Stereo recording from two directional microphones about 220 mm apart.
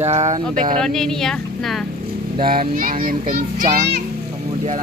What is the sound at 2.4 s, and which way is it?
Child singing, 40° right (ahead or behind).